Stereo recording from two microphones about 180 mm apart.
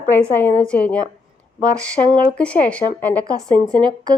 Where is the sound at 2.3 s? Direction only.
5° left (ahead or behind).